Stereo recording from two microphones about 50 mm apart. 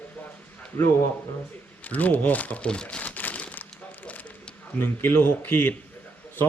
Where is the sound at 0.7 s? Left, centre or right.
Left.